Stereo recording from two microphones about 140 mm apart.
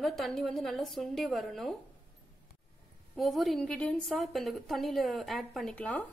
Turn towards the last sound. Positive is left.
turn(degrees=10)  # may be behind; listen again after turning